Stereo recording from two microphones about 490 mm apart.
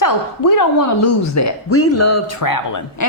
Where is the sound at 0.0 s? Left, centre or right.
Left.